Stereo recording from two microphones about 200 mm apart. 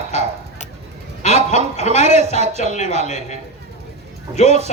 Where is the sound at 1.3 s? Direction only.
30° right (ahead or behind).